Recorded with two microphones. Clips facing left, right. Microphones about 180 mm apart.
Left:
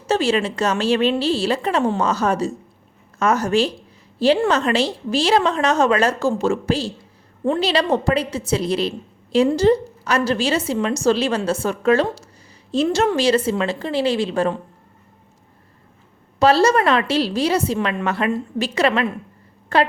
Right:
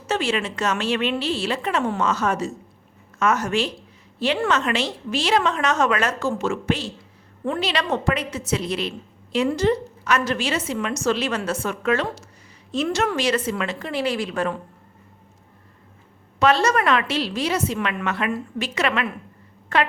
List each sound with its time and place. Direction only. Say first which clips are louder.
0.1 s a woman's voice: left 5 dB; 35° left (ahead or behind)
16.4 s a woman's voice: left 4 dB; 35° left (ahead or behind)